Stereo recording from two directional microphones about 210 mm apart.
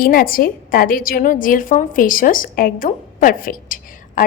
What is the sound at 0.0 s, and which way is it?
A woman's voice, 45° left (ahead or behind).